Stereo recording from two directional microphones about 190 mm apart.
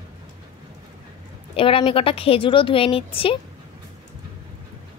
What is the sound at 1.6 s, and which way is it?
Speech, 30° left (ahead or behind).